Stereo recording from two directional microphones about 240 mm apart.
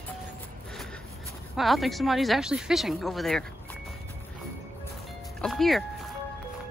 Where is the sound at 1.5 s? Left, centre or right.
Centre.